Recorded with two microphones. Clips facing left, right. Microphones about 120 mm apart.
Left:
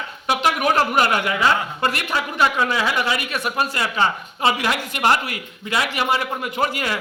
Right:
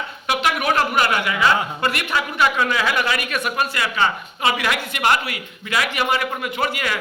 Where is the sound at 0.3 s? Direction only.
40° left (ahead or behind).